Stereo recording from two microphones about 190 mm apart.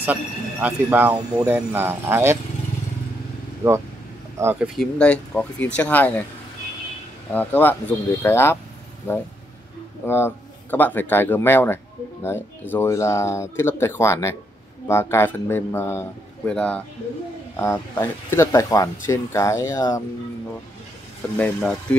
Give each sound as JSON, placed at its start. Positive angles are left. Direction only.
{"t": 0.0, "sound": "speech", "side_deg": -10}
{"t": 3.6, "sound": "speech", "side_deg": -10}
{"t": 4.7, "sound": "speech", "side_deg": 5}
{"t": 7.3, "sound": "speech", "side_deg": 10}
{"t": 10.0, "sound": "speech", "side_deg": 10}
{"t": 21.4, "sound": "speech", "side_deg": 5}